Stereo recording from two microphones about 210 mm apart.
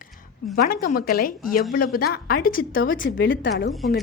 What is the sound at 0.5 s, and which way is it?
A woman's voice, 45° left (ahead or behind).